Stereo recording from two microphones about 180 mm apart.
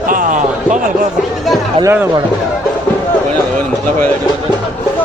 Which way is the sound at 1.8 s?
10° right (ahead or behind).